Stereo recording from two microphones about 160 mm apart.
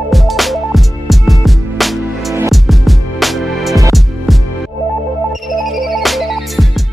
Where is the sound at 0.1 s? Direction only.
Centre (ahead or behind).